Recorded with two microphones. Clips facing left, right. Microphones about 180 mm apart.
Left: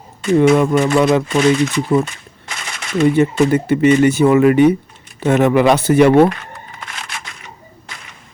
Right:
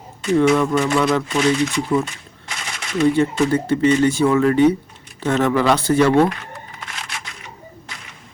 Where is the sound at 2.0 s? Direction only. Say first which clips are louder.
Left 2 dB; 50° left (ahead or behind).